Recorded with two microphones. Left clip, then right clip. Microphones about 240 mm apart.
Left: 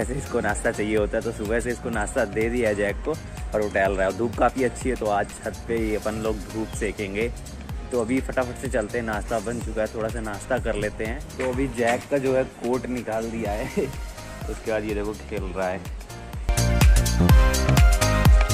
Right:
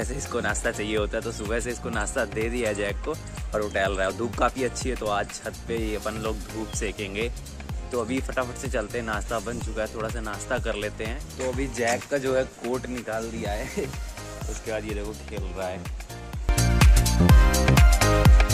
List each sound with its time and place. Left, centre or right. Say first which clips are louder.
0.0 s speech: left 3 dB; centre
14.7 s speech: left 5 dB; centre
16.7 s music: right 2 dB; centre